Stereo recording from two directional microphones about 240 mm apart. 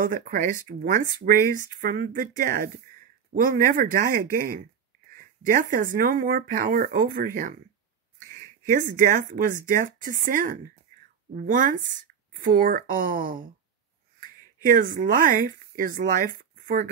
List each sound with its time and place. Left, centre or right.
0.0 s speech: right